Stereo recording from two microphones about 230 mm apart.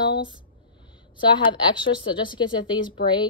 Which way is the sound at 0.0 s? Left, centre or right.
Left.